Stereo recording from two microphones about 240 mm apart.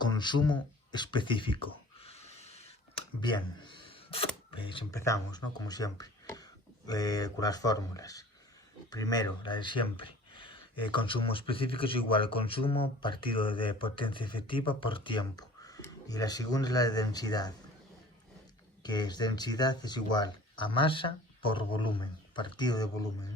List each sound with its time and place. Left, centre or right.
0.0 s a sound: centre
4.5 s speech: left
18.8 s speech: centre